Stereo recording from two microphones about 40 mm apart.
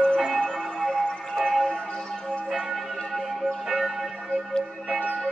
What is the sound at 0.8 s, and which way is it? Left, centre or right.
Music, centre.